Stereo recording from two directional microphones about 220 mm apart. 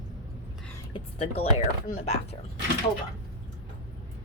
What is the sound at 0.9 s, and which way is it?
Speech, 25° left (ahead or behind).